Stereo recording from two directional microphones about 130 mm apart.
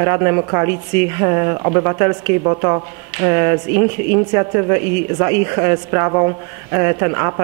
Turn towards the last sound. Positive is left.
turn(degrees=-25)  # may be behind; listen again after turning